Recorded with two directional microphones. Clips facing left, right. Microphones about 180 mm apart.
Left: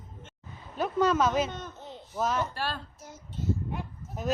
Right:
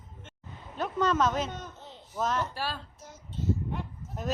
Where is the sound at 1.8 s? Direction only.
15° left (ahead or behind).